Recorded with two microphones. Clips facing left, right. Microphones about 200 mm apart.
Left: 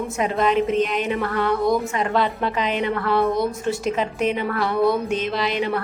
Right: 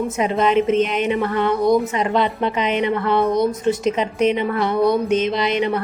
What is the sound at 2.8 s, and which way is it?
Music, 20° right (ahead or behind).